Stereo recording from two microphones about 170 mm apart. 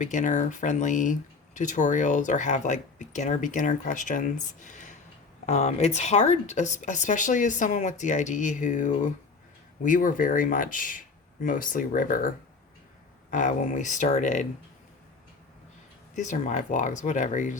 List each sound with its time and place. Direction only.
0.0 s speech: 45° left (ahead or behind)
13.3 s speech: 50° left (ahead or behind)
16.1 s speech: 45° left (ahead or behind)